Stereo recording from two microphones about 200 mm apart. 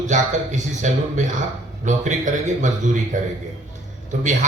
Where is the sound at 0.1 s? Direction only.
35° right (ahead or behind).